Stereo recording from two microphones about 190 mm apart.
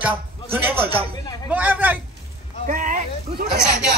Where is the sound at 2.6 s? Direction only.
45° right (ahead or behind).